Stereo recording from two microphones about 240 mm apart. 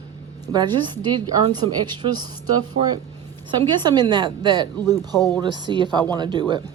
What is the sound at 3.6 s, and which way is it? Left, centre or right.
Speech, centre.